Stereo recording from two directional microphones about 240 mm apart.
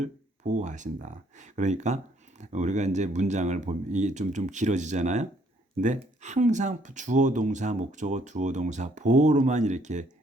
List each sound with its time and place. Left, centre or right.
0.0 s speech: right